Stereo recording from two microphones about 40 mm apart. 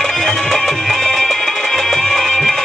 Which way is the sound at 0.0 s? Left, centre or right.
Centre.